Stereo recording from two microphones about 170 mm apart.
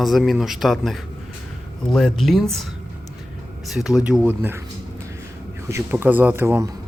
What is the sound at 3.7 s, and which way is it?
Speech, 5° right (ahead or behind).